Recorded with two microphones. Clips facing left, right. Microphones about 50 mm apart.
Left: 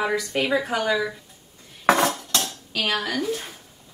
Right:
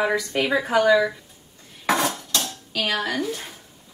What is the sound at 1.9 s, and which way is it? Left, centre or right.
Cutlery, left.